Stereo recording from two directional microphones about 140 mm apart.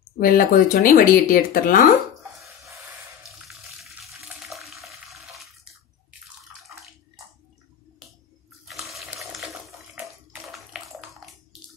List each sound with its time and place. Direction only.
0.2 s speech: 90° left; by 1.9 s 75° left (ahead or behind)
3.3 s water: centre (ahead or behind)
8.6 s bathtub: centre (ahead or behind)